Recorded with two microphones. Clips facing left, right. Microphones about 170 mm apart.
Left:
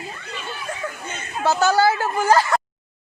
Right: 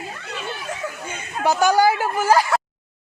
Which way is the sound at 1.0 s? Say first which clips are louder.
Even; 10° right (ahead or behind).